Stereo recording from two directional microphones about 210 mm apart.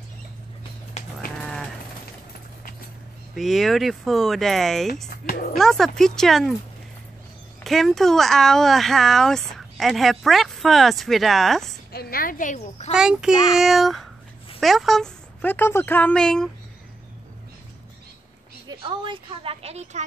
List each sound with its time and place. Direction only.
1.4 s sheep: centre (ahead or behind)
3.3 s speech: centre (ahead or behind)
5.3 s speech: 45° left (ahead or behind)
5.6 s speech: centre (ahead or behind)
7.6 s speech: centre (ahead or behind)
11.9 s speech: 45° left (ahead or behind); by 12.9 s 30° left (ahead or behind)
12.9 s speech: 5° right (ahead or behind)
18.7 s a woman's voice: 20° right (ahead or behind)